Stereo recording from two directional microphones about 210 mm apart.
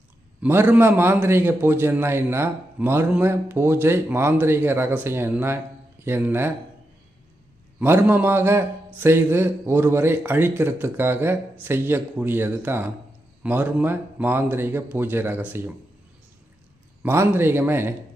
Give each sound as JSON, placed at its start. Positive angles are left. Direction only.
{"t": 0.4, "sound": "a man's voice", "side_deg": -10}
{"t": 7.8, "sound": "a man's voice", "side_deg": -10}
{"t": 17.0, "sound": "a man's voice", "side_deg": -10}